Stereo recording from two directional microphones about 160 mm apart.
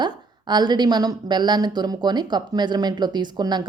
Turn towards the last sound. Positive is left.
turn(degrees=-25)  # may be behind; listen again after turning